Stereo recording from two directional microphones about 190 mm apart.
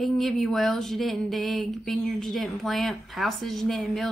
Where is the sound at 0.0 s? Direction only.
Centre (ahead or behind).